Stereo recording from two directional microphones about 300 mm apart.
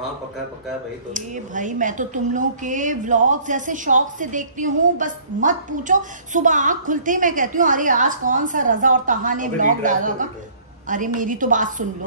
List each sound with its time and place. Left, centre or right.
1.1 s speech: right